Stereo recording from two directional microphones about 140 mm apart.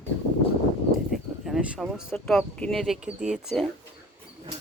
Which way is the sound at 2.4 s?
5° left (ahead or behind).